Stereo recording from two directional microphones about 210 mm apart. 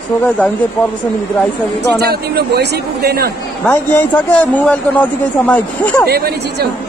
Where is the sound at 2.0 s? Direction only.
50° right (ahead or behind).